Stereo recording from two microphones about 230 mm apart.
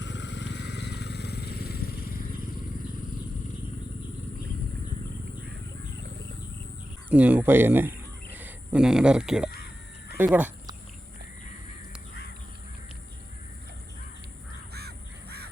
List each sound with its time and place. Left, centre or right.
0.0 s vehicle: left
7.1 s speech: centre
14.7 s crow: right